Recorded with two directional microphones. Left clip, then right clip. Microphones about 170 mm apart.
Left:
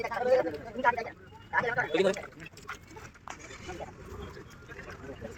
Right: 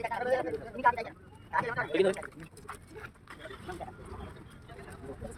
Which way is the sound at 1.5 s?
40° left (ahead or behind).